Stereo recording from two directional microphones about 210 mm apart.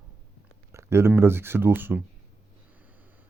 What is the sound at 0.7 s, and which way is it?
Speech, 15° right (ahead or behind).